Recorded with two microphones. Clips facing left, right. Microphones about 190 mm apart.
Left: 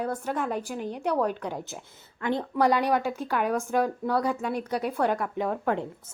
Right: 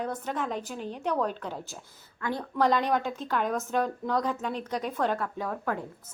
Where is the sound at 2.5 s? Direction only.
10° left (ahead or behind).